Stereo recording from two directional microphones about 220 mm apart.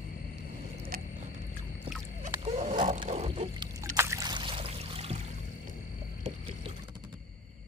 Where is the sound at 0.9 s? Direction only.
40° right (ahead or behind).